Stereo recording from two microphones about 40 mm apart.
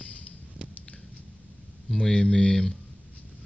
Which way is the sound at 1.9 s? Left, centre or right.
Centre.